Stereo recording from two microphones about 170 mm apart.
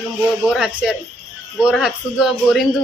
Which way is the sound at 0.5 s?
Centre (ahead or behind).